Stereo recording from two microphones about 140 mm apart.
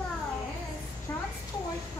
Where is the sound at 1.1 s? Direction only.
20° left (ahead or behind).